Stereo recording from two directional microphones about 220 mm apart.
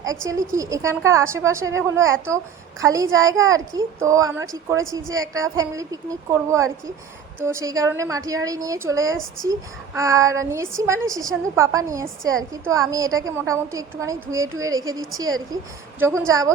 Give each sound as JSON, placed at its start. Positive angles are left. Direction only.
{"t": 0.3, "sound": "a woman's voice", "side_deg": -15}
{"t": 4.9, "sound": "a woman's voice", "side_deg": -60}
{"t": 5.5, "sound": "a woman's voice", "side_deg": -15}
{"t": 16.0, "sound": "a woman's voice", "side_deg": -10}